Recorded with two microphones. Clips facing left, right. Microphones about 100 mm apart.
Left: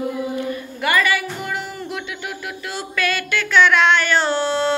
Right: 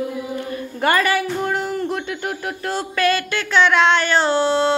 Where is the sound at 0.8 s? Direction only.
40° right (ahead or behind).